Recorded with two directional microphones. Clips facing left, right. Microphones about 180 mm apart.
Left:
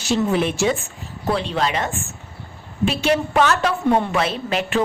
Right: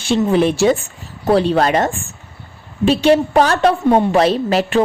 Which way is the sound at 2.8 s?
30° right (ahead or behind).